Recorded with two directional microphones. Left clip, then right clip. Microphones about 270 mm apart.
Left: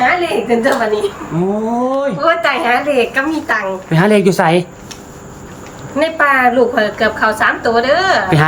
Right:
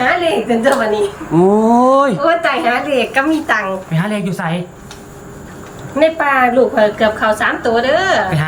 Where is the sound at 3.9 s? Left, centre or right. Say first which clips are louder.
Left 9 dB; left.